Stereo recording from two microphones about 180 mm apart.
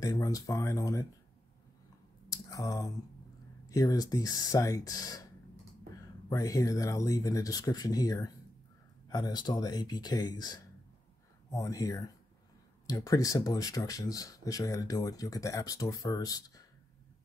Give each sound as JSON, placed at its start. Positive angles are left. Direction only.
{"t": 0.0, "sound": "speech", "side_deg": 20}
{"t": 2.2, "sound": "a sound", "side_deg": 20}
{"t": 3.6, "sound": "speech", "side_deg": 20}